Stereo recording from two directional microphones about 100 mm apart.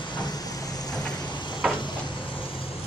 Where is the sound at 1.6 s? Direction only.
5° right (ahead or behind).